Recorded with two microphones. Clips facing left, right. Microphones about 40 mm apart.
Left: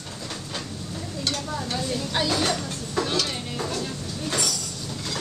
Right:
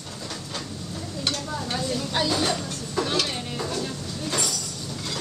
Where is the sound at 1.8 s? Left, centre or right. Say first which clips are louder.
Right 1 dB; centre.